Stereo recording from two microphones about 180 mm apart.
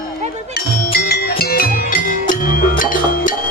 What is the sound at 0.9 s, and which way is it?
Music, 55° left (ahead or behind).